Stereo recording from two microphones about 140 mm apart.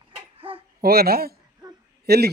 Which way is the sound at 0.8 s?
90° right.